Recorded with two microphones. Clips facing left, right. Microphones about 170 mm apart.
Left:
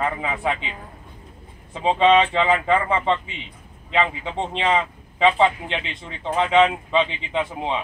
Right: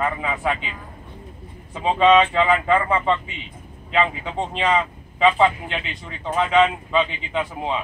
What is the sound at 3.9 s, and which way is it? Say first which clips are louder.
Speech: right 1 dB; 25° left (ahead or behind).